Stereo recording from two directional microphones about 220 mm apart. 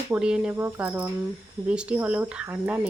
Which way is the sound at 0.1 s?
5° right (ahead or behind).